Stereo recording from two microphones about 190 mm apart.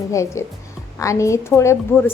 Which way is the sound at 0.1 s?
15° left (ahead or behind).